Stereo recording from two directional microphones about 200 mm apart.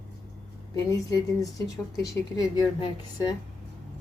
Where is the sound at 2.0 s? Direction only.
15° left (ahead or behind).